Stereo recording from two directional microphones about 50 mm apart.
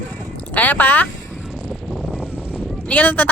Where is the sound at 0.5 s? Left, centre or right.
Left.